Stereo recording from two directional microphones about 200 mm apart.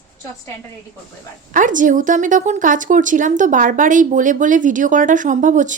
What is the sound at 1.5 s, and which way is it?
Speech, 40° right (ahead or behind).